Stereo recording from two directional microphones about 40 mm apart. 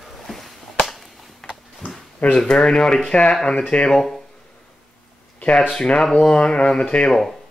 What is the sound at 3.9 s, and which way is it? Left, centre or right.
Speech, centre.